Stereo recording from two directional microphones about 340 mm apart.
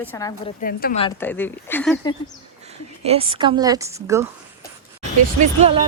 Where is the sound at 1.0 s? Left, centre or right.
Centre.